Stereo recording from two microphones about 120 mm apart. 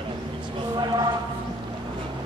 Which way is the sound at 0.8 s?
35° right (ahead or behind).